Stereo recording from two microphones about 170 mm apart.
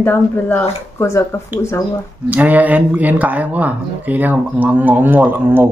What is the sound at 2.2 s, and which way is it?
Speech, 10° right (ahead or behind).